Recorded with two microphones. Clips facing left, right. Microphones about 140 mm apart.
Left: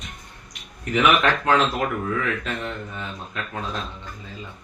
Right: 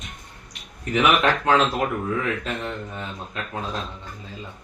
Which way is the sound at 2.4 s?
35° right (ahead or behind).